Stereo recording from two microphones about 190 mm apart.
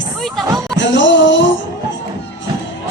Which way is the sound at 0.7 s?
75° left (ahead or behind).